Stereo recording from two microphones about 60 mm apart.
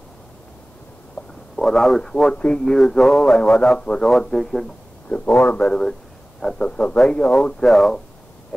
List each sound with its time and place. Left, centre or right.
1.6 s speech: centre
4.4 s speech: centre
5.3 s speech: left
5.6 s speech: centre